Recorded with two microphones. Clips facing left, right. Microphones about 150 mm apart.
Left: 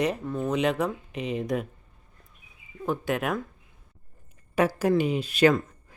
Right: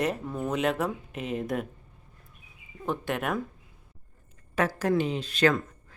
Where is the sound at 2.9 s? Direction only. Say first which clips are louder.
Left 2 dB; centre (ahead or behind).